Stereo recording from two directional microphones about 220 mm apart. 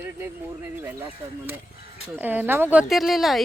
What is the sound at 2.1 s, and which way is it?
Speech, 5° right (ahead or behind).